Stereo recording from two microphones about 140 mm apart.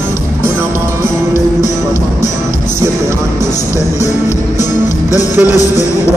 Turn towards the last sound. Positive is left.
turn(degrees=25)  # may be behind; listen again after turning